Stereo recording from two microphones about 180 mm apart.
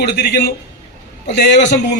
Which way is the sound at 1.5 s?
75° left (ahead or behind).